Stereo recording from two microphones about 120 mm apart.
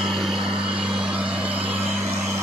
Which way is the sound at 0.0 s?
5° right (ahead or behind).